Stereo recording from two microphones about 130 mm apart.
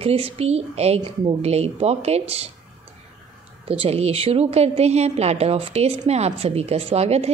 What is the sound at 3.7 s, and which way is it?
Speech, 50° right (ahead or behind).